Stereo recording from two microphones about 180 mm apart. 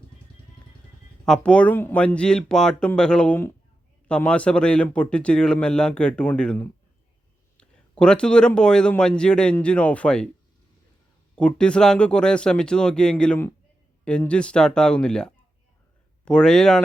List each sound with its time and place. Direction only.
1.2 s a man's voice: 5° left (ahead or behind)
11.3 s a man's voice: 5° left (ahead or behind)